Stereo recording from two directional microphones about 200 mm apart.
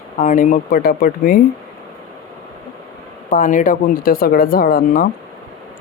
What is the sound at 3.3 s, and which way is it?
Speech, 40° left (ahead or behind).